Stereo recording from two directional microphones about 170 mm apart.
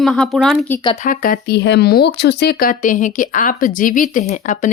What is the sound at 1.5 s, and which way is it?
Speech, 85° left.